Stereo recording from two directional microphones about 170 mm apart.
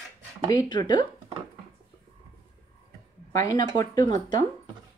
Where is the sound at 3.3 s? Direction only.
20° left (ahead or behind).